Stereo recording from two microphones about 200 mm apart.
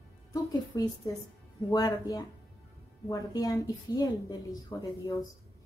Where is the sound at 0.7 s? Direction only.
15° left (ahead or behind).